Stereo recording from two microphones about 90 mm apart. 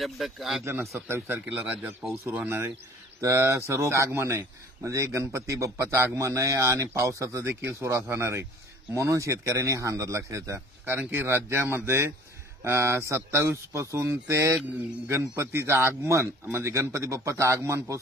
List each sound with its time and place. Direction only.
0.0 s speech: centre (ahead or behind)
1.0 s speech: 30° right (ahead or behind)
10.9 s speech: 20° right (ahead or behind)